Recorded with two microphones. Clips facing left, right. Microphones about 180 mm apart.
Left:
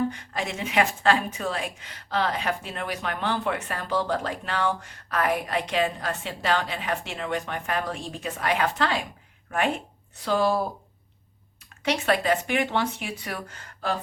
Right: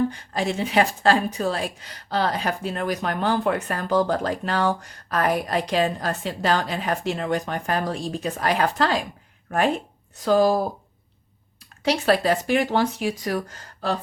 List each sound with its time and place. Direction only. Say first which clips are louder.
0.1 s a woman's voice: right 6 dB; 35° right (ahead or behind)
11.9 s a woman's voice: right 3 dB; 35° right (ahead or behind)